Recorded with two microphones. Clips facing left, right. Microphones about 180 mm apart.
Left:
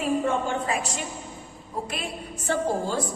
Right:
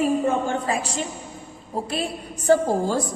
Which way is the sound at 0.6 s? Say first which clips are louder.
Right 3 dB; 30° right (ahead or behind).